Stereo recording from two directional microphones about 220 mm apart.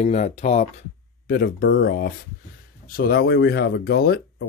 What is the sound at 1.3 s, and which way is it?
Speech, 45° left (ahead or behind).